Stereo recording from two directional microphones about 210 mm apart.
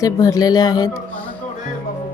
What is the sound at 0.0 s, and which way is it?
Speech, 15° left (ahead or behind).